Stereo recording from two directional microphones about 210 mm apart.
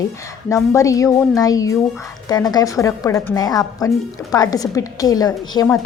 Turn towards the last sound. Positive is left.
turn(degrees=20)  # may be behind; listen again after turning